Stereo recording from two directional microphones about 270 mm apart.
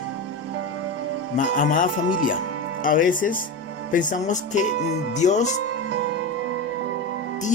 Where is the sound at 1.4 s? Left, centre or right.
Left.